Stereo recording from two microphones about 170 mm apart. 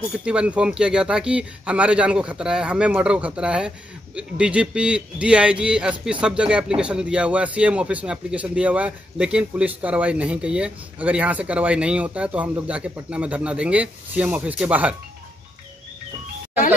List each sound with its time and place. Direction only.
0.2 s speech: 5° right (ahead or behind)